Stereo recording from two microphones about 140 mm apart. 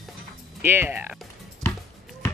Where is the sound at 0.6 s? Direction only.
15° right (ahead or behind).